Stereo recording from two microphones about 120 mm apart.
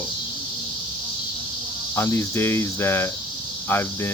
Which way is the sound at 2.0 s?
20° left (ahead or behind).